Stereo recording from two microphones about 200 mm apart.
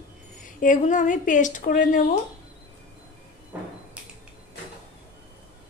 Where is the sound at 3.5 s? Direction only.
10° right (ahead or behind).